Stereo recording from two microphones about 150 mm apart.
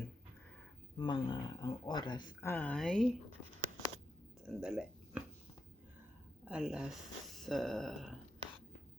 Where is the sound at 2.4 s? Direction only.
10° left (ahead or behind).